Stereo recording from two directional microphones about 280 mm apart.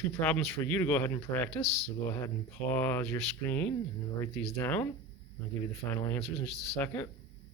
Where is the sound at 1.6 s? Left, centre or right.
Left.